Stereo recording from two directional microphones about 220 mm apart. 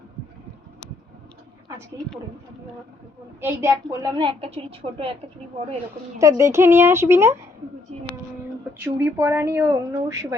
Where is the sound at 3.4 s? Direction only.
15° right (ahead or behind).